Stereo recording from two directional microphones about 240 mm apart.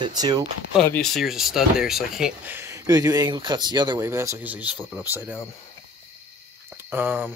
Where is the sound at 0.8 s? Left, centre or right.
Centre.